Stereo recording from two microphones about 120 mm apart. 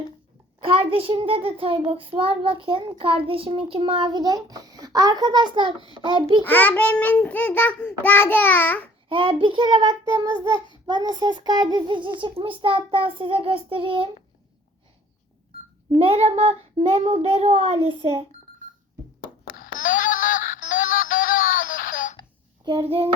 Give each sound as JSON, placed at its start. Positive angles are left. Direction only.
{"t": 0.6, "sound": "a child's voice", "side_deg": -50}
{"t": 6.4, "sound": "a child's voice", "side_deg": 15}
{"t": 9.0, "sound": "a child's voice", "side_deg": -45}
{"t": 15.9, "sound": "a child's voice", "side_deg": -50}
{"t": 19.8, "sound": "music", "side_deg": 90}
{"t": 21.6, "sound": "a sound", "side_deg": 90}
{"t": 22.7, "sound": "a child's voice", "side_deg": -45}